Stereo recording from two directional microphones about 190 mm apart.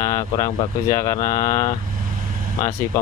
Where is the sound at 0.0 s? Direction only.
15° left (ahead or behind).